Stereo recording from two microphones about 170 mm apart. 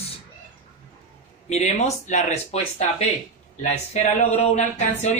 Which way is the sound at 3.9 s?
40° left (ahead or behind).